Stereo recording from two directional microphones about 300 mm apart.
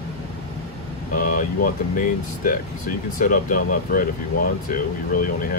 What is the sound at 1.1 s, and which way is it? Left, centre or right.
Speech, left.